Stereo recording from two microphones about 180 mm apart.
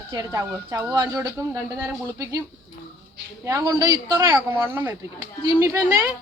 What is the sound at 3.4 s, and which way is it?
Speech, 20° right (ahead or behind).